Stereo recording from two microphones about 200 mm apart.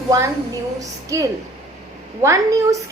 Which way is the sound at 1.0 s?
15° right (ahead or behind).